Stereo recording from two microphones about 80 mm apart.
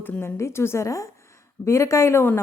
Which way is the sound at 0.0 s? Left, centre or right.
Left.